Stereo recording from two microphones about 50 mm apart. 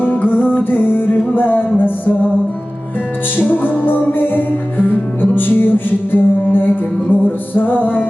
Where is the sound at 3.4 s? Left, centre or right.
Left.